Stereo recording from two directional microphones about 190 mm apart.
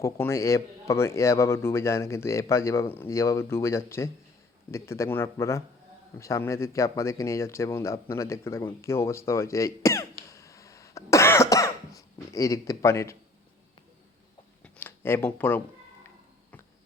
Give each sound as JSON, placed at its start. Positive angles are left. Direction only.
{"t": 0.0, "sound": "a man's voice", "side_deg": 15}
{"t": 10.3, "sound": "cough", "side_deg": 15}
{"t": 14.6, "sound": "a sound", "side_deg": 10}